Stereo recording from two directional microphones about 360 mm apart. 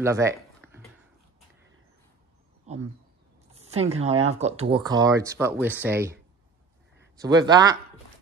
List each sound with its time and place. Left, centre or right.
0.0 s a sound: centre
2.7 s speech: centre
7.2 s speech: centre